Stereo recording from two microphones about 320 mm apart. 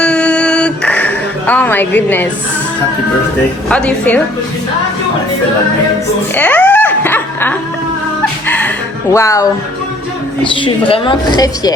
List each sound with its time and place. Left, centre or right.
0.0 s music: centre
3.7 s a woman's voice: centre
6.3 s a sound: centre
8.2 s music: centre
9.1 s speech: centre